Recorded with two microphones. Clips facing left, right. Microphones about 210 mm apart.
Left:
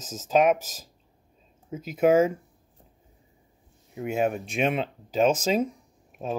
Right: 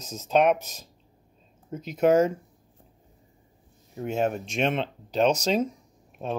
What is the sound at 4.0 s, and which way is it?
Speech, 5° left (ahead or behind).